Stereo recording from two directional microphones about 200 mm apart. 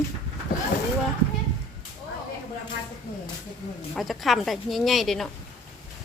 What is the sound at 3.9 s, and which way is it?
A woman's voice, centre (ahead or behind).